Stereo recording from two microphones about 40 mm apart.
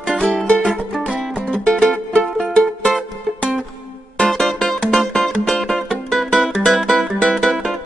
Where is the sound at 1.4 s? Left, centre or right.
Left.